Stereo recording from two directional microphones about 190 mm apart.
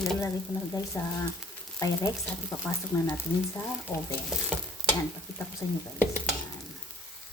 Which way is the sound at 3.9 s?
20° left (ahead or behind).